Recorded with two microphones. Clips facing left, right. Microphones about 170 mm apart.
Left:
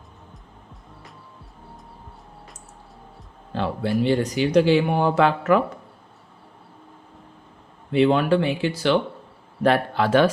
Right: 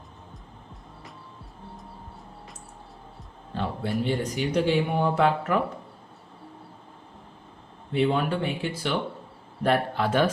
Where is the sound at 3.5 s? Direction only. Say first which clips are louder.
Left 5 dB; 90° left.